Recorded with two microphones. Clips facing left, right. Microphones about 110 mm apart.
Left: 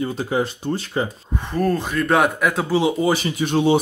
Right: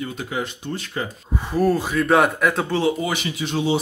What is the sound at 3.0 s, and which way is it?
Speech, 35° left (ahead or behind).